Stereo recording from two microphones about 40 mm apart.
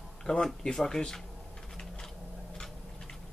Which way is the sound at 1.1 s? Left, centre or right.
Centre.